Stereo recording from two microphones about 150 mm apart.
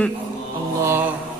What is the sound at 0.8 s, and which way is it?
Mantra, 15° right (ahead or behind).